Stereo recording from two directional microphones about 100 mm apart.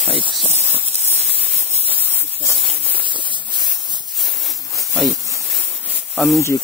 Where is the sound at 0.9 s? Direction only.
90° right.